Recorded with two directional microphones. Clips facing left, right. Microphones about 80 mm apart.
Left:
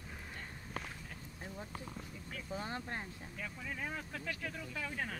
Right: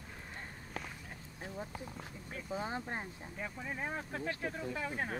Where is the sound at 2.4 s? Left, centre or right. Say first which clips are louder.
Right 3 dB; centre.